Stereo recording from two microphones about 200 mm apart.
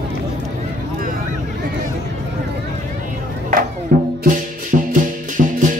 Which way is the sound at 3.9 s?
45° right (ahead or behind).